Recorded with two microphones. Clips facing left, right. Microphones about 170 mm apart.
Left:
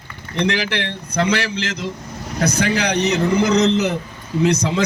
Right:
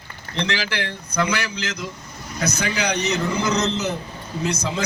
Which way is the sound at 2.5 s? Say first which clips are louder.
Left 5 dB; 55° left (ahead or behind).